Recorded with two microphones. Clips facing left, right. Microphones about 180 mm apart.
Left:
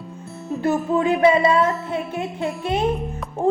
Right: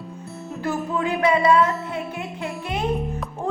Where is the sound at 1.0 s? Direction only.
25° left (ahead or behind).